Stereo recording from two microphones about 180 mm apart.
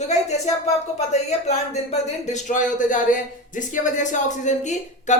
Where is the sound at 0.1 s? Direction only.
40° left (ahead or behind).